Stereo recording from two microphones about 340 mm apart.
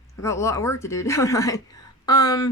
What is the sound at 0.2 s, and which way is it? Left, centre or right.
Speech, centre.